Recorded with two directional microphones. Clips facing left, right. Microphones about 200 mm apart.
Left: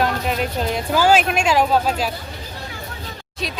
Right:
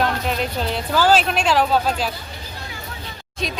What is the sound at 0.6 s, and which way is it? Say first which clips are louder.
Speech: left 1 dB; 10° left (ahead or behind).